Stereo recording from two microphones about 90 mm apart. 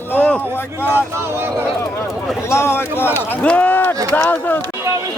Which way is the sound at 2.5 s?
30° left (ahead or behind).